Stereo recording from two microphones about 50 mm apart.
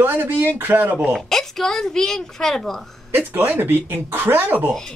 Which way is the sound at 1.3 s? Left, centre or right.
Centre.